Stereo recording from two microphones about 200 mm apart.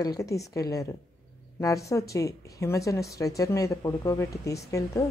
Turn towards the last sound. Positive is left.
turn(degrees=15)  # may be behind; listen again after turning